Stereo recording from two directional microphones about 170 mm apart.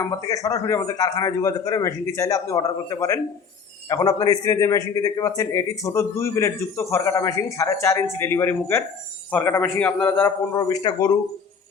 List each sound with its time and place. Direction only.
0.0 s a man's voice: 20° left (ahead or behind)